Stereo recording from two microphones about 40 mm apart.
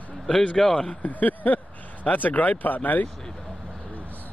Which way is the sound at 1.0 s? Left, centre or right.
Left.